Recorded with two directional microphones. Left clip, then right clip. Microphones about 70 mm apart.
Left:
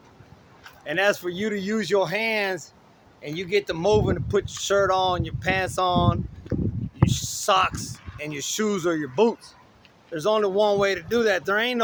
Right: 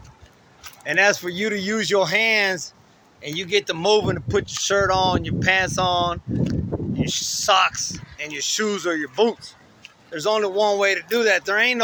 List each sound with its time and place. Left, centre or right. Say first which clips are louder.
0.9 s speech: right 4 dB; left
3.2 s speech: right 2 dB; left
4.3 s speech: right 2 dB; left
7.0 s a sound: right 2 dB; left
8.2 s speech: right 3 dB; left